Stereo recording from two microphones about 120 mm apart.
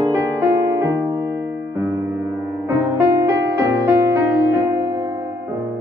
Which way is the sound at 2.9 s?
25° right (ahead or behind).